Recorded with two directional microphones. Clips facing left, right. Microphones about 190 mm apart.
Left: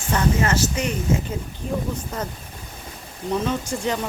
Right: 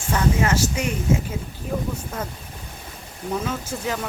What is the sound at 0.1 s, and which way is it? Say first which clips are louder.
Speech: even; 10° right (ahead or behind).